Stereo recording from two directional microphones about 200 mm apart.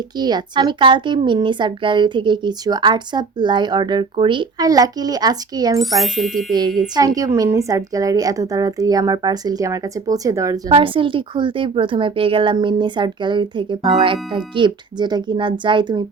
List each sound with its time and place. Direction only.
0.2 s speech: 20° right (ahead or behind)
5.8 s speech: centre (ahead or behind)
6.5 s a woman's voice: 20° right (ahead or behind)
10.7 s speech: 25° right (ahead or behind)